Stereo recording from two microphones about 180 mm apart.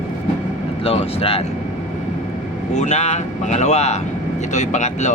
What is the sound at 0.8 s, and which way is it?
Speech, 30° left (ahead or behind).